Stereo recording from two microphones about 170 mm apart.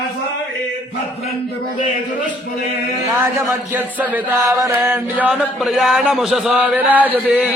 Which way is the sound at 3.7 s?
15° right (ahead or behind).